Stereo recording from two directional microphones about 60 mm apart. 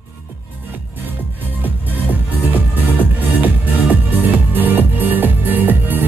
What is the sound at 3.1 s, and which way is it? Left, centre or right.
Music, right.